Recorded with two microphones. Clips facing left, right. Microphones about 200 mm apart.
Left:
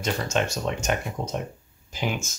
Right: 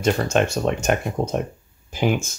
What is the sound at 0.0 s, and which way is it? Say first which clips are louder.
Speech: right 6 dB; 55° right (ahead or behind).